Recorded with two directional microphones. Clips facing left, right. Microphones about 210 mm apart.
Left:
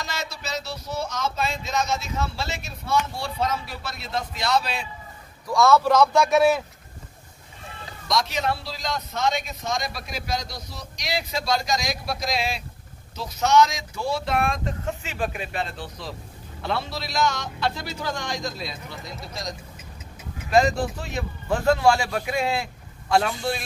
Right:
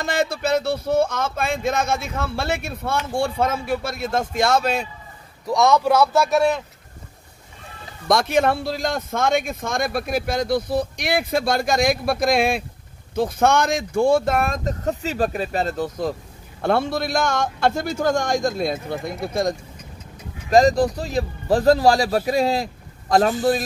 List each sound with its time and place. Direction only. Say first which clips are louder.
0.0 s a man's voice: right 11 dB; 55° right (ahead or behind)
5.5 s a man's voice: right 1 dB; 15° right (ahead or behind); by 6.6 s centre (ahead or behind)
8.1 s a man's voice: right 7 dB; 55° right (ahead or behind)
20.4 s a man's voice: right 5 dB; 35° right (ahead or behind)